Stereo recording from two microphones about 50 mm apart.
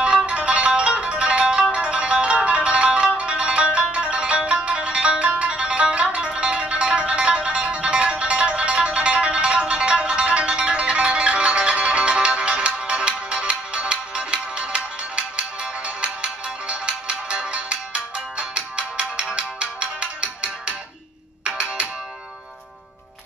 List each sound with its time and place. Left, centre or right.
0.3 s music: right